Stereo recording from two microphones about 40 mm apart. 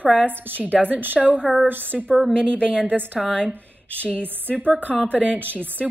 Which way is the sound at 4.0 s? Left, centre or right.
Left.